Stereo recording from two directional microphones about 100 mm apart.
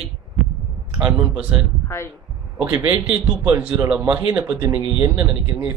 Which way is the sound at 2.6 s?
20° right (ahead or behind).